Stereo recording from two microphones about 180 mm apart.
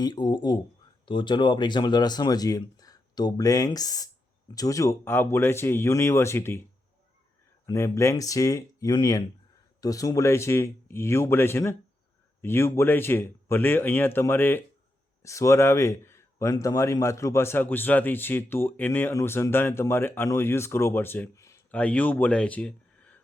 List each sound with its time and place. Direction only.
0.0 s speech: 25° left (ahead or behind)
7.7 s speech: 15° left (ahead or behind)